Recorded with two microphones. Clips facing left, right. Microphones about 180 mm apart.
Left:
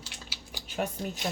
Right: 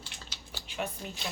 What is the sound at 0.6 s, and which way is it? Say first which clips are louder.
Speech: left 4 dB; 45° left (ahead or behind).